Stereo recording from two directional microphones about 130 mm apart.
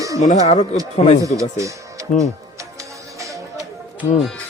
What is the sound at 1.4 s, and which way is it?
Speech, 25° right (ahead or behind).